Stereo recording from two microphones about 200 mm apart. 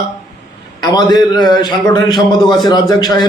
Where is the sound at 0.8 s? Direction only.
20° left (ahead or behind).